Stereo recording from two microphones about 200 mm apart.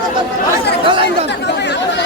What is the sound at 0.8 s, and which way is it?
Chatter, 25° right (ahead or behind).